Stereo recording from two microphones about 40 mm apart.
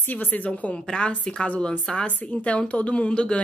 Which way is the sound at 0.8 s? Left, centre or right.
Centre.